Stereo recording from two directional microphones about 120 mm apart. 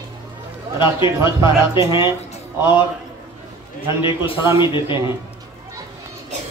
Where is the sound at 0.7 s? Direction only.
40° left (ahead or behind).